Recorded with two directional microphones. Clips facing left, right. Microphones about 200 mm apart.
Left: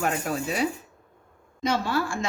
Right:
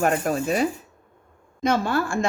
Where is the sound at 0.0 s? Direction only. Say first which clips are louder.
Right 5 dB; 50° right (ahead or behind).